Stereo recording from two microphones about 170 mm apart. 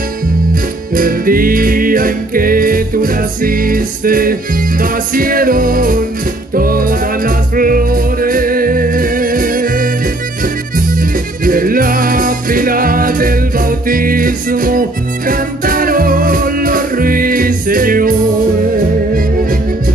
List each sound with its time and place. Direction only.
0.9 s music: 55° right (ahead or behind)